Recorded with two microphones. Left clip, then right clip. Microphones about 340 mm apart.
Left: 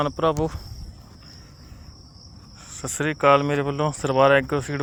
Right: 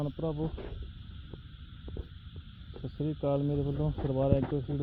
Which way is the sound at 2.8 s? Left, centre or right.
Left.